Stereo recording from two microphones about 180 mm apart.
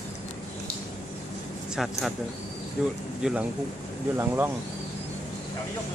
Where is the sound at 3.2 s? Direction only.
5° right (ahead or behind).